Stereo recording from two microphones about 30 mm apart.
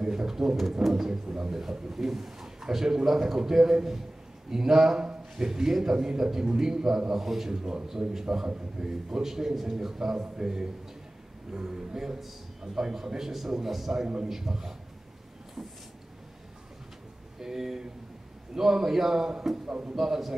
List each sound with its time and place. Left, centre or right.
0.0 s a sound: right
0.3 s a man's voice: centre
1.2 s speech: right
1.5 s a man's voice: centre
14.0 s a man's voice: right
14.3 s a man's voice: centre
17.4 s a man's voice: centre
19.7 s a man's voice: right
20.0 s a man's voice: centre